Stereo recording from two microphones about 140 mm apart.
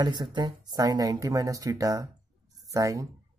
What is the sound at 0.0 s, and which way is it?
Speech, 30° right (ahead or behind).